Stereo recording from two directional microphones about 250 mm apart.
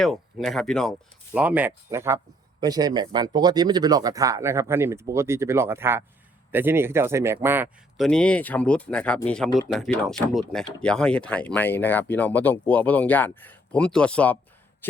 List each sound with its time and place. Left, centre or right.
0.0 s speech: centre